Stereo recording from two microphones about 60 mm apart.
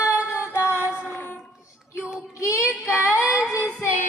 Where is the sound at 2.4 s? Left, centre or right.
Left.